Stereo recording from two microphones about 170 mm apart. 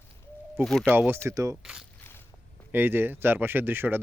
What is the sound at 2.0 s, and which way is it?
Walk, 15° left (ahead or behind).